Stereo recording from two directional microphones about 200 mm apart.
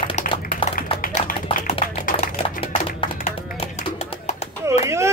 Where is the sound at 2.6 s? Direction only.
30° left (ahead or behind).